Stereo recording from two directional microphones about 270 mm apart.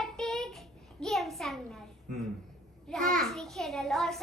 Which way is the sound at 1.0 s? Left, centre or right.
Centre.